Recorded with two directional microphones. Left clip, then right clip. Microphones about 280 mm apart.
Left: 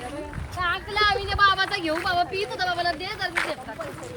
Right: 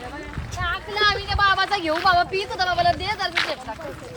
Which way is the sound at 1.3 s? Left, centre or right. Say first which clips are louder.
Right 1 dB; centre.